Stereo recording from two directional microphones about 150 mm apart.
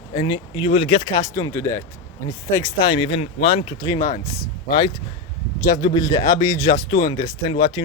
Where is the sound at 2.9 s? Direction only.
40° left (ahead or behind).